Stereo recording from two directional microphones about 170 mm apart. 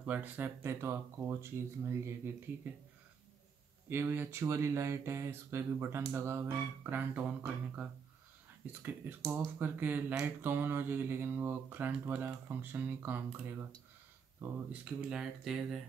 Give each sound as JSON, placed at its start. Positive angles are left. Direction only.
{"t": 0.0, "sound": "speech", "side_deg": -10}
{"t": 3.9, "sound": "speech", "side_deg": -15}